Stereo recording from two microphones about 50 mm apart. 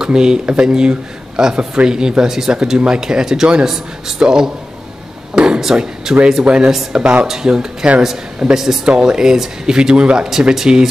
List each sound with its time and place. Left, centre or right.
0.0 s speech: centre
5.3 s a sound: centre
6.2 s speech: centre
6.7 s speech: centre
7.0 s speech: right
7.2 s speech: centre